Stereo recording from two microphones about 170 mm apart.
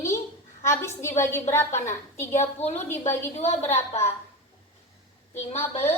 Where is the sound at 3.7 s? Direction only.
15° left (ahead or behind).